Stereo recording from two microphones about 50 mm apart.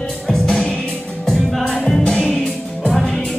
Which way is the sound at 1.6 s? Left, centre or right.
Centre.